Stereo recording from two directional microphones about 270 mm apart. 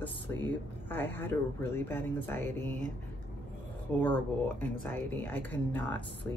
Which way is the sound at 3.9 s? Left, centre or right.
Centre.